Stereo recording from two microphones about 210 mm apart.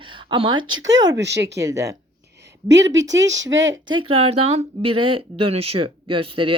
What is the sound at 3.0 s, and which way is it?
Speech, 15° right (ahead or behind).